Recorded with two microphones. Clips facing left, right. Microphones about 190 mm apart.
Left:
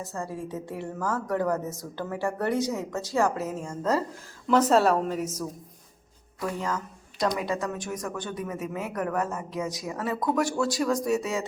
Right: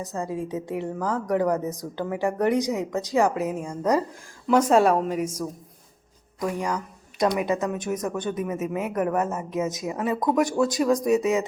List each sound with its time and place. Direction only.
0.0 s a woman's voice: 15° right (ahead or behind)